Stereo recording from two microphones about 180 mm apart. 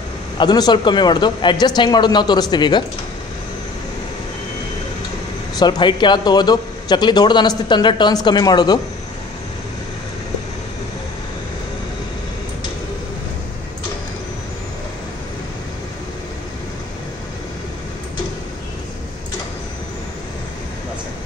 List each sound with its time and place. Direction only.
0.4 s a man's voice: 20° left (ahead or behind)
5.6 s a man's voice: 25° left (ahead or behind)